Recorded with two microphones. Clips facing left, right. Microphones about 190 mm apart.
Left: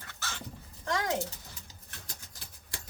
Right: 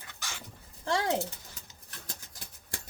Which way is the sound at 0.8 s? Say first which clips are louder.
Right 2 dB; 30° right (ahead or behind).